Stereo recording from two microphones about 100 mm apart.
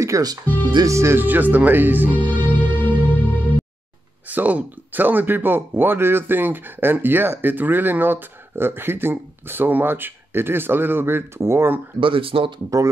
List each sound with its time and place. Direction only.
0.0 s speech: 35° right (ahead or behind); by 2.1 s 20° right (ahead or behind)
2.1 s music: 15° left (ahead or behind)
4.3 s speech: 15° right (ahead or behind)
12.0 s speech: 65° right (ahead or behind)